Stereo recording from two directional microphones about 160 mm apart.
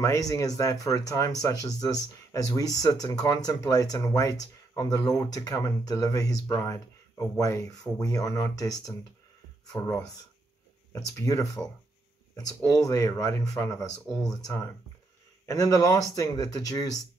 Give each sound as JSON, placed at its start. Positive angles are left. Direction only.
{"t": 0.0, "sound": "speech", "side_deg": 20}